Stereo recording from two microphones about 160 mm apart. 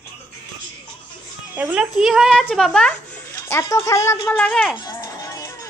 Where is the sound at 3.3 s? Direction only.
15° left (ahead or behind).